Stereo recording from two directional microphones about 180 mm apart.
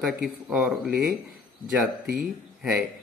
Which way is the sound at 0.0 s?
5° right (ahead or behind).